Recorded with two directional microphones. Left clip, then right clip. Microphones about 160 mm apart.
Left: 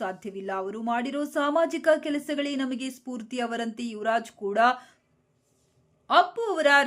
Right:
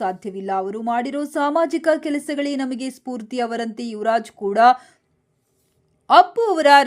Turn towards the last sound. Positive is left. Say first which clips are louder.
# right 8 dB
turn(degrees=-35)  # may be behind; listen again after turning